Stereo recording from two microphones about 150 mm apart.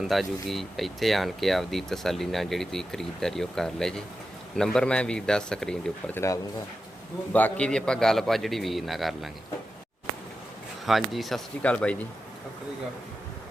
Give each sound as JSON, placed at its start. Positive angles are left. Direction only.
{"t": 0.0, "sound": "speech", "side_deg": 0}
{"t": 6.1, "sound": "speech", "side_deg": 20}
{"t": 7.3, "sound": "speech", "side_deg": 10}
{"t": 10.8, "sound": "speech", "side_deg": 0}